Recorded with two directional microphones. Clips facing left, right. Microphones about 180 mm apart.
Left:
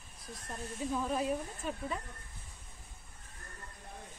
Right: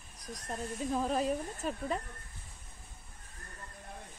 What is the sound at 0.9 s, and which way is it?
Speech, 35° right (ahead or behind).